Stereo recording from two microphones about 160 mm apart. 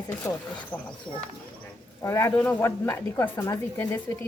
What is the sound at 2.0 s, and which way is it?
A woman's voice, 15° left (ahead or behind).